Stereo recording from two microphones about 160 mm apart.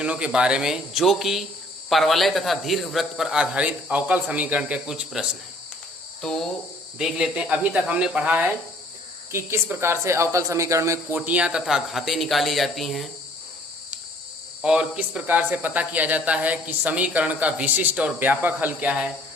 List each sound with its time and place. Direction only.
0.0 s a man's voice: 5° right (ahead or behind)
11.2 s a man's voice: 5° right (ahead or behind)
14.6 s speech: 5° right (ahead or behind)